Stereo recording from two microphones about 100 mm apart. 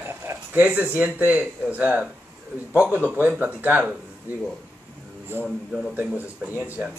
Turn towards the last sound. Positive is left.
turn(degrees=-15)  # may be behind; listen again after turning